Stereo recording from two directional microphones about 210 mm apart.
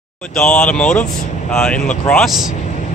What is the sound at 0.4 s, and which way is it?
Speech, 5° left (ahead or behind).